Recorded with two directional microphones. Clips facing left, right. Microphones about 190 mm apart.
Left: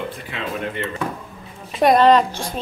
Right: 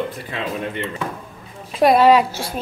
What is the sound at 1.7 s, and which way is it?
Speech, 5° right (ahead or behind).